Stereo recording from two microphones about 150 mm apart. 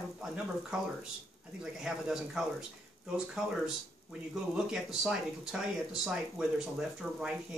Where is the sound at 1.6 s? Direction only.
5° right (ahead or behind).